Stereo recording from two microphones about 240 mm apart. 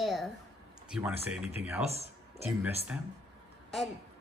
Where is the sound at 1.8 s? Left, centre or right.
Right.